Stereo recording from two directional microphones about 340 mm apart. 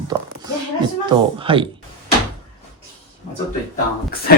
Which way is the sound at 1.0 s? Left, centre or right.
Centre.